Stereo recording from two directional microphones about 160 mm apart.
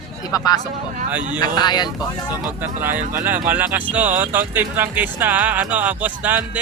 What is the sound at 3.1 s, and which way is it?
Speech, 10° right (ahead or behind).